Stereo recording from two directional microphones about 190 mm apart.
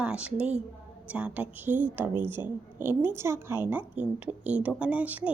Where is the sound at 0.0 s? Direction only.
5° right (ahead or behind).